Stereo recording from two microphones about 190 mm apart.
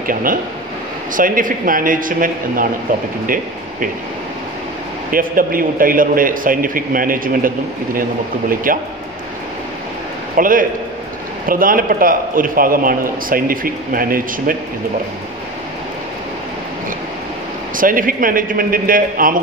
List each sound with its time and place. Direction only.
0.0 s a man's voice: 45° right (ahead or behind)
5.1 s a man's voice: 50° right (ahead or behind)
10.3 s a man's voice: 45° right (ahead or behind)
17.7 s a man's voice: 45° right (ahead or behind)